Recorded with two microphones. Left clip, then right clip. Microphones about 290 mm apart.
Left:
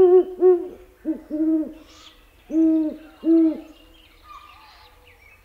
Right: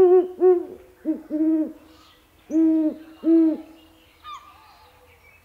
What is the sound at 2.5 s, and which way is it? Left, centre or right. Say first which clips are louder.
Hoot: even; centre.